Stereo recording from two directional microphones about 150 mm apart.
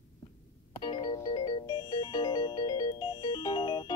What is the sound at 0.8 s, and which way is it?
Music, 30° left (ahead or behind).